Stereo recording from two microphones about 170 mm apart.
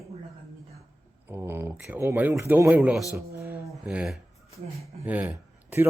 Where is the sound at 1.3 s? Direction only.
15° right (ahead or behind).